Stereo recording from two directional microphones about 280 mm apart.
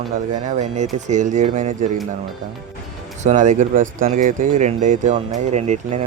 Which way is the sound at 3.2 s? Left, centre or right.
Right.